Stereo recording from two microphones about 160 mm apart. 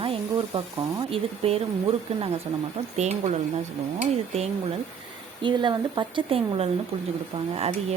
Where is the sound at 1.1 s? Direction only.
40° right (ahead or behind).